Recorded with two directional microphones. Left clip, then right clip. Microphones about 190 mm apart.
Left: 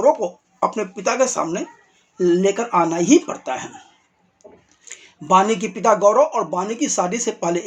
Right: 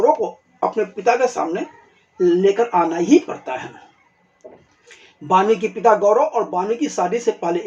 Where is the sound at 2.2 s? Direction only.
35° left (ahead or behind).